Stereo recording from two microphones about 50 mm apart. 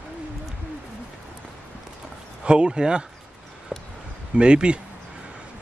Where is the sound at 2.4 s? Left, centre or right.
Centre.